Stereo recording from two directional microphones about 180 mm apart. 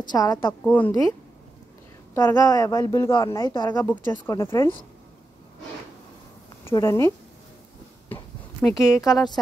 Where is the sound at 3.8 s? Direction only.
10° left (ahead or behind).